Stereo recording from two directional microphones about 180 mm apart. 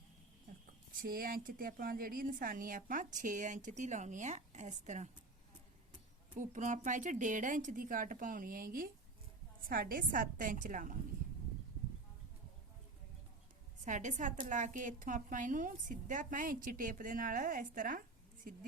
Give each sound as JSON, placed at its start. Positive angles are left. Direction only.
{"t": 1.0, "sound": "a woman's voice", "side_deg": -55}
{"t": 6.3, "sound": "a woman's voice", "side_deg": -45}
{"t": 13.8, "sound": "a woman's voice", "side_deg": -45}